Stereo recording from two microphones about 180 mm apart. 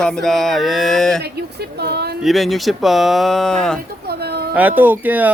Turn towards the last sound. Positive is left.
turn(degrees=-10)  # may be behind; listen again after turning